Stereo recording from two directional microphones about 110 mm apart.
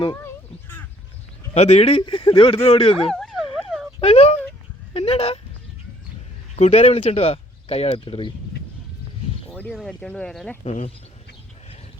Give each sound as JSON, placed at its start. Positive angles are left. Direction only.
{"t": 0.2, "sound": "a sound", "side_deg": 20}
{"t": 1.5, "sound": "speech", "side_deg": 85}
{"t": 3.1, "sound": "dog", "side_deg": 0}
{"t": 4.0, "sound": "speech", "side_deg": 65}
{"t": 6.6, "sound": "speech", "side_deg": 80}
{"t": 9.5, "sound": "a sound", "side_deg": 15}
{"t": 10.0, "sound": "speech", "side_deg": 10}
{"t": 10.6, "sound": "speech", "side_deg": 80}